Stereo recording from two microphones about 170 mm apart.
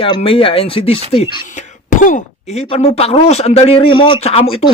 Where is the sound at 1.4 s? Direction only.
45° left (ahead or behind).